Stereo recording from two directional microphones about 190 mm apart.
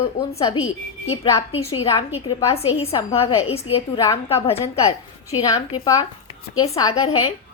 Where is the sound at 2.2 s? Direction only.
30° left (ahead or behind).